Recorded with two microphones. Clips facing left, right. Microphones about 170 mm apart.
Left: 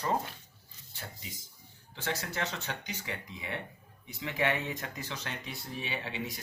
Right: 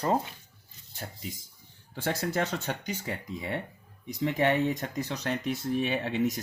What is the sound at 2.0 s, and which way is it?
Speech, 50° right (ahead or behind).